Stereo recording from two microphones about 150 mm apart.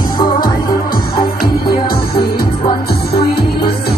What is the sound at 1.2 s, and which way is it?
Music, 90° left.